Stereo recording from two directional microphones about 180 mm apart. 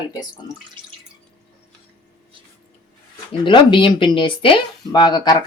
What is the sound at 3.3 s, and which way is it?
Speech, 25° left (ahead or behind).